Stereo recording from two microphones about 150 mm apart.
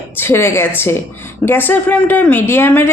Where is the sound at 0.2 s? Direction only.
15° left (ahead or behind).